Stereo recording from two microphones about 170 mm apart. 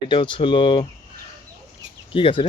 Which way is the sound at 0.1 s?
30° left (ahead or behind).